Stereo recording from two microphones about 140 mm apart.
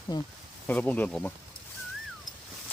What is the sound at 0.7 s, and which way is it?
Speech, 10° left (ahead or behind).